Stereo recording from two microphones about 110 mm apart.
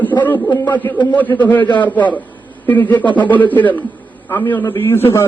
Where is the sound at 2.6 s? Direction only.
15° left (ahead or behind).